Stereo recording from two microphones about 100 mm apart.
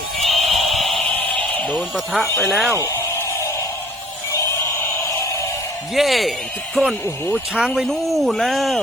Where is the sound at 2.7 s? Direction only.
25° left (ahead or behind).